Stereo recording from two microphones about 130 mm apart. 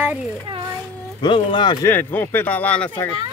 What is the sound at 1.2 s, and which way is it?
Speech, 40° left (ahead or behind).